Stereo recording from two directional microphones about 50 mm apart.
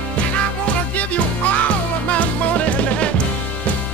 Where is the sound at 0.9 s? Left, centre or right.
Left.